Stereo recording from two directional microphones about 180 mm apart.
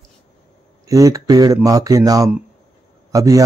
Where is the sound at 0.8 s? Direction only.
20° right (ahead or behind).